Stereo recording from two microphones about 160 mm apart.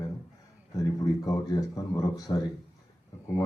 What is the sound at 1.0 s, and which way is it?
Speech, 25° left (ahead or behind).